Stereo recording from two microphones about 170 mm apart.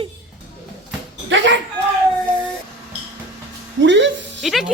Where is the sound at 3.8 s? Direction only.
90° right.